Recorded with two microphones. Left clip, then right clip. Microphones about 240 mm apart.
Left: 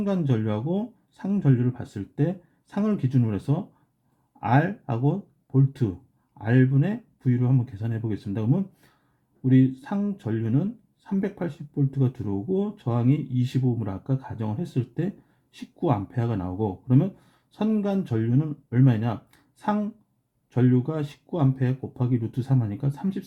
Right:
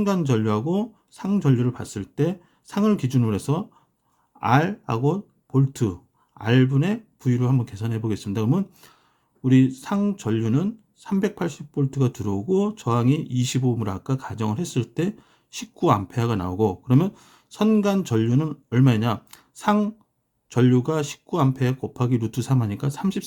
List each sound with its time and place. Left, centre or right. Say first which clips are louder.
0.0 s speech: right 4 dB; centre